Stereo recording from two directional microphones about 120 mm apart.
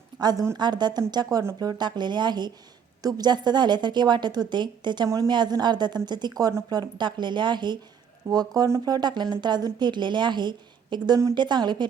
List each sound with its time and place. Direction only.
0.2 s a woman's voice: 35° right (ahead or behind)
5.0 s a woman's voice: 25° right (ahead or behind)
5.3 s a woman's voice: 35° right (ahead or behind)